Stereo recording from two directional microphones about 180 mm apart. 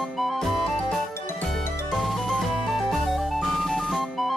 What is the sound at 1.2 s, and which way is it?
Music, 15° left (ahead or behind).